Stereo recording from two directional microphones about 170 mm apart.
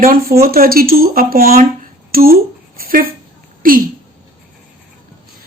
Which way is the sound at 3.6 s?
55° right (ahead or behind).